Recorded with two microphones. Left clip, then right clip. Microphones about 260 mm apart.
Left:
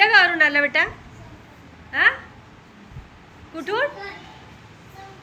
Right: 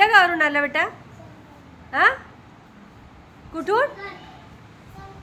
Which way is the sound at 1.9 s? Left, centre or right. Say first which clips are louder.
Even; centre.